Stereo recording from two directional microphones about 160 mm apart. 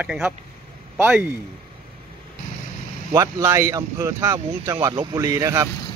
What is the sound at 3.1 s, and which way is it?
Speech, 20° right (ahead or behind).